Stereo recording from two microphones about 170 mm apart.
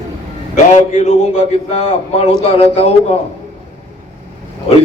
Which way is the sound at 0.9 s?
40° left (ahead or behind).